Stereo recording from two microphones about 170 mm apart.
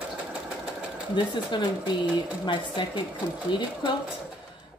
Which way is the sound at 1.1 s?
25° left (ahead or behind).